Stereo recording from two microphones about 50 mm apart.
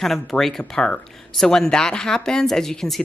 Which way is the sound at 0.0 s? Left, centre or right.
Centre.